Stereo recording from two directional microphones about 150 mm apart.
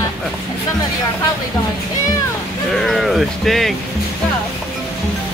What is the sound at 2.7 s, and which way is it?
Speech, centre (ahead or behind).